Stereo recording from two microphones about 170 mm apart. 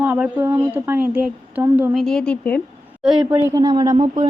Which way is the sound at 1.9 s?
5° left (ahead or behind).